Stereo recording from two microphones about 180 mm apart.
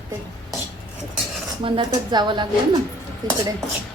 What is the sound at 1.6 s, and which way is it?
Speech, 25° right (ahead or behind).